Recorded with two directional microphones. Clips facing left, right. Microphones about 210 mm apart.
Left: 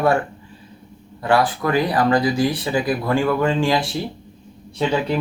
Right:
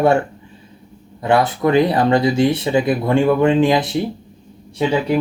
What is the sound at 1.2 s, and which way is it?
Speech, 20° right (ahead or behind).